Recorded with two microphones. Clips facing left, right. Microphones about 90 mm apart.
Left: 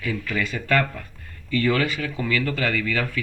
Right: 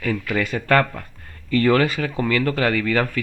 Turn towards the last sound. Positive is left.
turn(degrees=-45)  # may be behind; listen again after turning